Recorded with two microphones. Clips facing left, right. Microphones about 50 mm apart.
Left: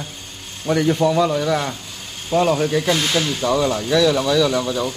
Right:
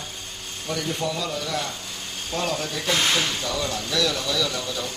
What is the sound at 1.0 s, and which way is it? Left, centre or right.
Speech, left.